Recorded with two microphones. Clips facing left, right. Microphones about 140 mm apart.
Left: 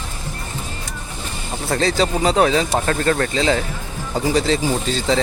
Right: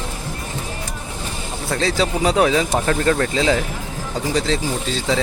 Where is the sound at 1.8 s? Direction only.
Centre (ahead or behind).